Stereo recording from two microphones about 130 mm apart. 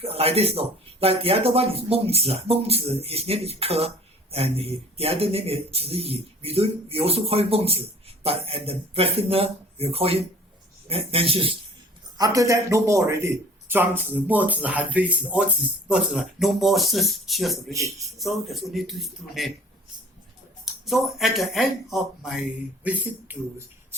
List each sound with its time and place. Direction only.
0.0 s speech: 50° right (ahead or behind)
12.1 s speech: 25° right (ahead or behind); by 17.6 s centre (ahead or behind)
17.7 s a man's voice: 25° right (ahead or behind)
18.2 s speech: centre (ahead or behind)
20.8 s speech: centre (ahead or behind)